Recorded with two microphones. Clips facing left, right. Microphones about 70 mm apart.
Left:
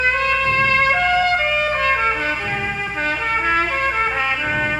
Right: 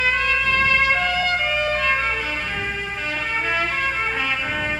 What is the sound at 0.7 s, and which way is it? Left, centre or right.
Music, left.